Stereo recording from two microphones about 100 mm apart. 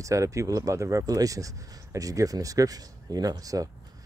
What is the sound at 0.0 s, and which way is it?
Speech, 30° right (ahead or behind).